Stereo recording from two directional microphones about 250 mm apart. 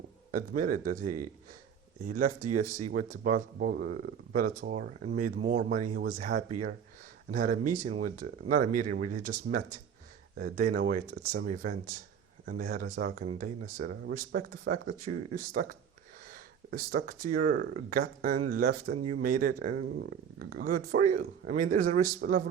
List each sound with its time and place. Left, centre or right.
0.3 s speech: right
1.0 s speech: right
2.0 s speech: right